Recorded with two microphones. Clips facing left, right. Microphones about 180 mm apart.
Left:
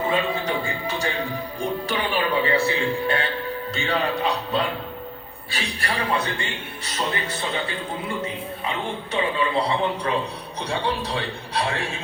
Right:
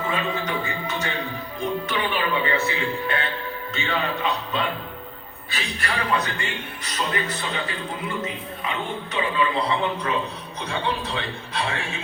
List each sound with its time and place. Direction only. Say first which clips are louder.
0.1 s a man's voice: left 3 dB; 35° left (ahead or behind)
9.1 s a man's voice: left 1 dB; 30° left (ahead or behind)